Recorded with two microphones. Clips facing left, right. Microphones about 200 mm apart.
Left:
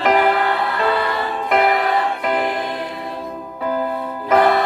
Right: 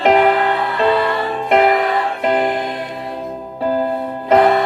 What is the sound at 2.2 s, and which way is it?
Music, 25° right (ahead or behind).